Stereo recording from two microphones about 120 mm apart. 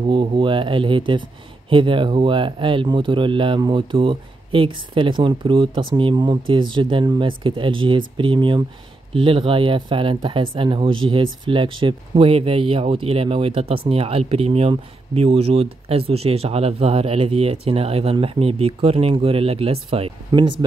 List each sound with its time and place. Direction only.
0.0 s speech: 45° right (ahead or behind)
20.2 s speech: 40° right (ahead or behind)